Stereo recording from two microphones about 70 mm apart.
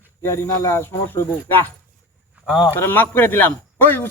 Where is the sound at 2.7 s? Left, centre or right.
Left.